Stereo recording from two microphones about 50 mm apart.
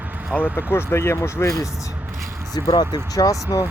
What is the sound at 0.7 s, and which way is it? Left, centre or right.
Speech, left.